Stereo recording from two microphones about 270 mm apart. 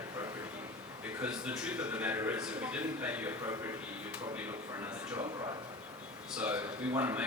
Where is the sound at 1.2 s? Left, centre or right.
Centre.